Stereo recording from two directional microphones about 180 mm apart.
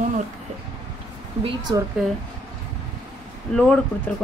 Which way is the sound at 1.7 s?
25° right (ahead or behind).